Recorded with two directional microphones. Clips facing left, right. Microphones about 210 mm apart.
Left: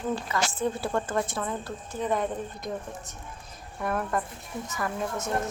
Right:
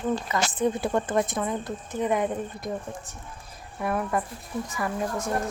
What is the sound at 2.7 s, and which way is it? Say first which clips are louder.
A woman's voice: right 2 dB; centre (ahead or behind).